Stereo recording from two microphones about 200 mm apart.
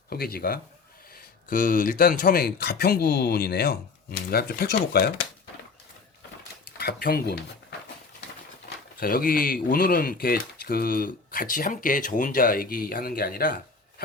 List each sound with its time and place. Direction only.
0.1 s speech: 50° left (ahead or behind)
6.7 s speech: 50° left (ahead or behind)
9.0 s speech: 45° left (ahead or behind)